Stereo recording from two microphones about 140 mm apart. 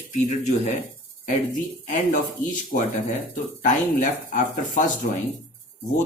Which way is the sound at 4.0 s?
70° left (ahead or behind).